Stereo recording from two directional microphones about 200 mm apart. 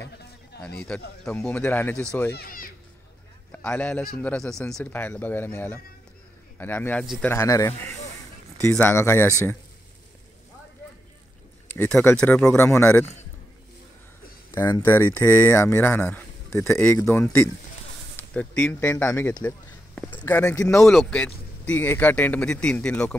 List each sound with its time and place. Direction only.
0.8 s speech: 5° left (ahead or behind)
2.3 s a child's voice: 45° left (ahead or behind)
3.5 s a man's voice: 5° left (ahead or behind)
11.6 s speech: 10° left (ahead or behind)
14.5 s speech: 10° left (ahead or behind)
20.6 s a man's voice: 5° left (ahead or behind)